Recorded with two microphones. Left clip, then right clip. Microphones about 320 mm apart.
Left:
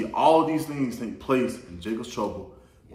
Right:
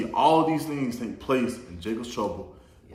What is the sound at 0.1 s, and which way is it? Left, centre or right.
A man's voice, centre.